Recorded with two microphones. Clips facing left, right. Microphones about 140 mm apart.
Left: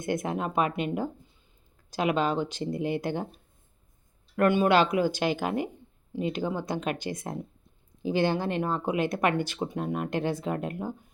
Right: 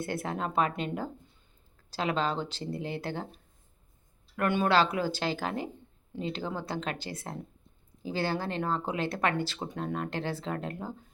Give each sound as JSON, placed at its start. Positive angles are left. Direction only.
{"t": 0.0, "sound": "speech", "side_deg": 15}
{"t": 4.4, "sound": "speech", "side_deg": 15}